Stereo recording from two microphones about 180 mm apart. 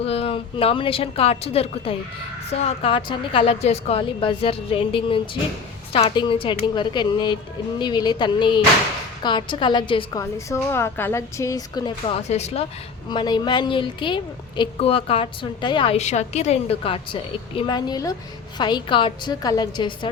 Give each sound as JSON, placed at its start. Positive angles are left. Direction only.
{"t": 0.0, "sound": "a woman's voice", "side_deg": 35}
{"t": 13.1, "sound": "a woman's voice", "side_deg": 25}